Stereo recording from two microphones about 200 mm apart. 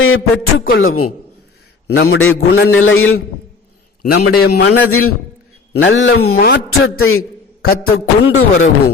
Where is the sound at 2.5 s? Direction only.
75° left (ahead or behind).